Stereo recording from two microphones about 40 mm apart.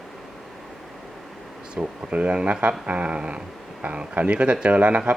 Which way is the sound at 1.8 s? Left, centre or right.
Right.